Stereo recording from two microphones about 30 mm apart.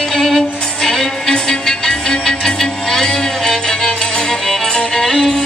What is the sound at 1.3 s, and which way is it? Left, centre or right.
Music, left.